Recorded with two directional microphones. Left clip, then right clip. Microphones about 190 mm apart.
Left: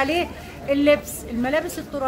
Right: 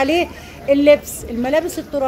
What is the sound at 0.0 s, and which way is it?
A woman's voice, 15° right (ahead or behind).